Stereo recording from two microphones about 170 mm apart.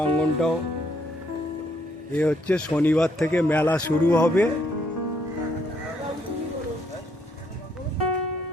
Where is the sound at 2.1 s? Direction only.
10° left (ahead or behind).